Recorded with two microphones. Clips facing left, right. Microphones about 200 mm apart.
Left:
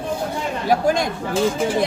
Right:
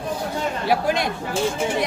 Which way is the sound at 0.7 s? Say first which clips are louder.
Left 4 dB; 45° left (ahead or behind).